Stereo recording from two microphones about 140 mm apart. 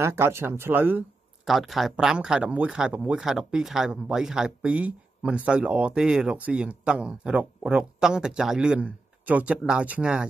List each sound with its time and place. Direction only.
0.0 s speech: 15° right (ahead or behind)
1.4 s speech: centre (ahead or behind)